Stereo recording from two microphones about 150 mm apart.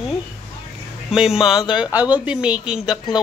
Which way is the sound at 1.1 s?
5° right (ahead or behind).